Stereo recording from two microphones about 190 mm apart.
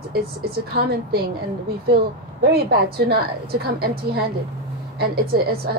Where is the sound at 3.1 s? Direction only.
55° right (ahead or behind).